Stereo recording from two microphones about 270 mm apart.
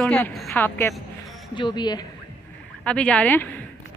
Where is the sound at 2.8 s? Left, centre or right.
Centre.